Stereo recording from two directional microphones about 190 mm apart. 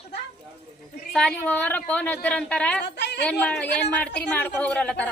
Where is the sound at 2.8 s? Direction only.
65° left (ahead or behind).